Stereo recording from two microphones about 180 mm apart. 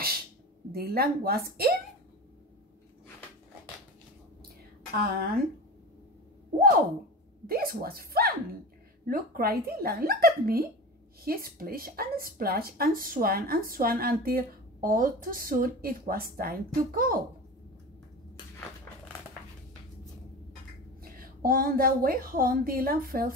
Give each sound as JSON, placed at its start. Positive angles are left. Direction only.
{"t": 0.7, "sound": "speech", "side_deg": -55}
{"t": 5.0, "sound": "speech", "side_deg": -55}
{"t": 7.4, "sound": "speech", "side_deg": -55}
{"t": 21.0, "sound": "speech", "side_deg": -55}